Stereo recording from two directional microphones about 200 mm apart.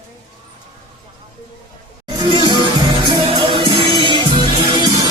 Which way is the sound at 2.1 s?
20° right (ahead or behind).